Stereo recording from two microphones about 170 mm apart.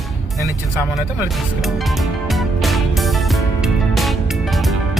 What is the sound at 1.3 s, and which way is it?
Music, centre (ahead or behind).